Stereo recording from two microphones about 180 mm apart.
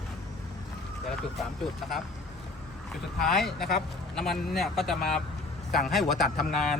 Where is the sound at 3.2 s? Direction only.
Centre (ahead or behind).